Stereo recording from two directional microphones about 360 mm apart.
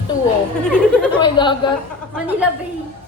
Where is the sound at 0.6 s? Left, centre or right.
Centre.